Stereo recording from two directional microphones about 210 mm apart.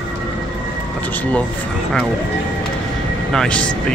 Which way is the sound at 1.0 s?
10° left (ahead or behind).